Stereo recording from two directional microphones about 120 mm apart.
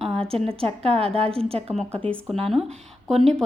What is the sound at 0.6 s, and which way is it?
A woman's voice, 55° right (ahead or behind).